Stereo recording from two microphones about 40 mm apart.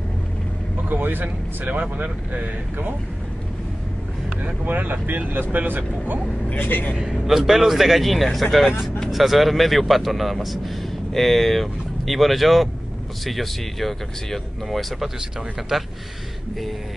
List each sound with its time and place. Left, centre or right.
0.8 s speech: right
4.6 s speech: right
6.5 s a man's voice: left
7.0 s a man's voice: centre
15.7 s speech: centre